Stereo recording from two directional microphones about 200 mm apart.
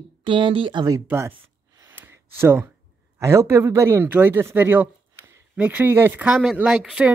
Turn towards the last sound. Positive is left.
turn(degrees=0)  # may be behind; listen again after turning